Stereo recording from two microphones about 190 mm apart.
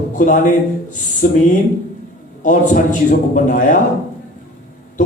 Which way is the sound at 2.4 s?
45° left (ahead or behind).